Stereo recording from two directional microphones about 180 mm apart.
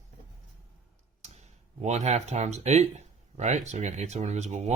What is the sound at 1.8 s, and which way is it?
Speech, 40° right (ahead or behind).